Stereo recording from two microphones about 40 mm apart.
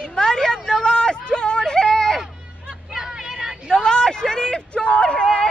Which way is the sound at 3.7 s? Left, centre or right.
Centre.